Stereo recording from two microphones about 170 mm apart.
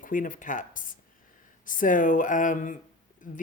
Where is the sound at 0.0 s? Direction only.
50° left (ahead or behind).